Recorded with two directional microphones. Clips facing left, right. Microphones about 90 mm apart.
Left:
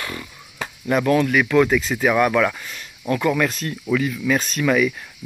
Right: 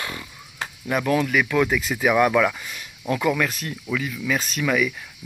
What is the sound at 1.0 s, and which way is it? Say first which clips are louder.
Speech: left 2 dB; 10° right (ahead or behind).